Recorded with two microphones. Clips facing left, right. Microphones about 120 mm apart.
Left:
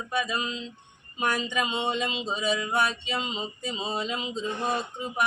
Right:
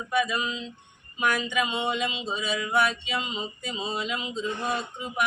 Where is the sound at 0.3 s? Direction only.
30° left (ahead or behind).